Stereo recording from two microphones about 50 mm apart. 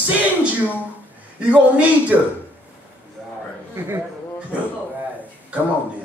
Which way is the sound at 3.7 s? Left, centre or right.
Right.